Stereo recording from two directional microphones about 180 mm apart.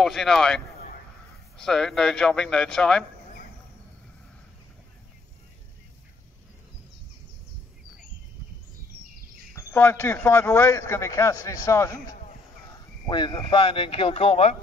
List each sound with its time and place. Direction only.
0.0 s speech: centre (ahead or behind)
1.6 s speech: centre (ahead or behind)
9.6 s a man's voice: 15° left (ahead or behind); by 14.6 s 35° left (ahead or behind)